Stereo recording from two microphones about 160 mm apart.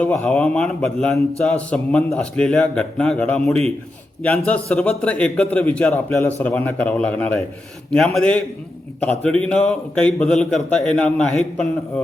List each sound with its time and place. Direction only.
0.0 s a man's voice: 5° left (ahead or behind)